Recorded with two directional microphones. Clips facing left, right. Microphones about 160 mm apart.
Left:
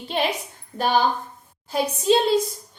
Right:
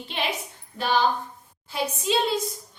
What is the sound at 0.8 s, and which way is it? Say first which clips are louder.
A woman's voice: left 2 dB; 50° left (ahead or behind).